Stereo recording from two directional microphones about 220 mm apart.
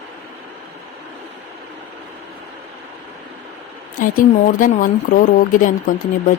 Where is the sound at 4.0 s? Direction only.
40° left (ahead or behind).